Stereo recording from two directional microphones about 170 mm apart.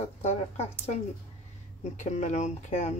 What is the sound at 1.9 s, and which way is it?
Speech, 45° left (ahead or behind).